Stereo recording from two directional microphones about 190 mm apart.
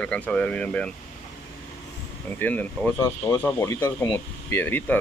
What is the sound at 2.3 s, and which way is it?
Speech, 10° left (ahead or behind).